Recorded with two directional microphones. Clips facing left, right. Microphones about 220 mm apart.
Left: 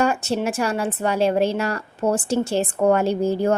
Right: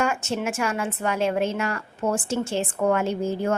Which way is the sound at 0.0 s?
35° left (ahead or behind).